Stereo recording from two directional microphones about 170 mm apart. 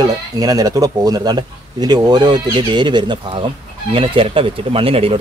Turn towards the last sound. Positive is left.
turn(degrees=-35)  # may be behind; listen again after turning